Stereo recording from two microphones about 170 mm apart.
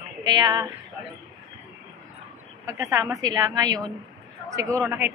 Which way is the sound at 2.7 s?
20° right (ahead or behind).